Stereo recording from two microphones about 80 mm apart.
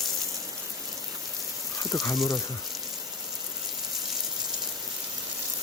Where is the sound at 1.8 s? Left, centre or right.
Left.